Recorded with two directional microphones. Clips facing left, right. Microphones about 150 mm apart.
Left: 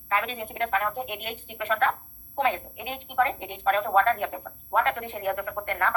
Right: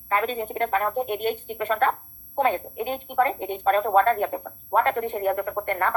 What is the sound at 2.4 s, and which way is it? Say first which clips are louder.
A woman's voice: right 4 dB; 40° right (ahead or behind).